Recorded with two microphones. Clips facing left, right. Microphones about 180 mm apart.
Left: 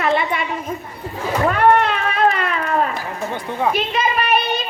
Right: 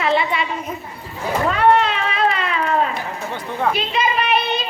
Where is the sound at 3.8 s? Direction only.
50° left (ahead or behind).